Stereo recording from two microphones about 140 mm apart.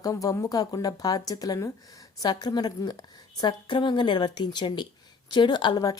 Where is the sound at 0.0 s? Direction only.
25° left (ahead or behind).